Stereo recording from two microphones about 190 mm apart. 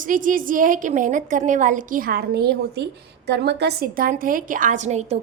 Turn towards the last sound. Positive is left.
turn(degrees=-35)  # may be behind; listen again after turning